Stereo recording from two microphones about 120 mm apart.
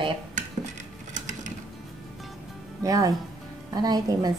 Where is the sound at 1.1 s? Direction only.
90° right.